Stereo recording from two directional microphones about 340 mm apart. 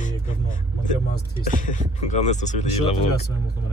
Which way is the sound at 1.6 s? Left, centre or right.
Left.